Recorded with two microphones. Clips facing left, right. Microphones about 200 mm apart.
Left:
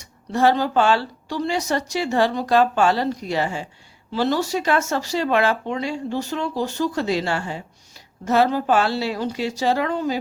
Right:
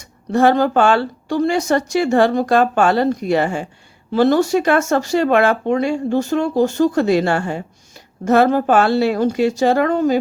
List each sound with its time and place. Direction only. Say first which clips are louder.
0.0 s speech: right 4 dB; 50° right (ahead or behind)